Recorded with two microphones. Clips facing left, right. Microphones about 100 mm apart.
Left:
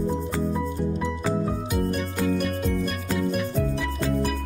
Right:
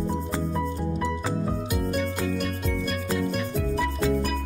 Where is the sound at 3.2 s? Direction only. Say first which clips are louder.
Left 2 dB; 5° left (ahead or behind).